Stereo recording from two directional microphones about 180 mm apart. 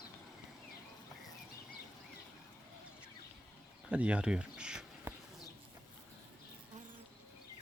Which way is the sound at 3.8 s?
5° right (ahead or behind).